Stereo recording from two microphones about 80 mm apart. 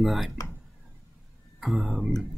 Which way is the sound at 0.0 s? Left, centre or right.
Centre.